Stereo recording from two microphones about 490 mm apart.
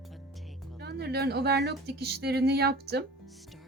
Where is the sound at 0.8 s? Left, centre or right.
Centre.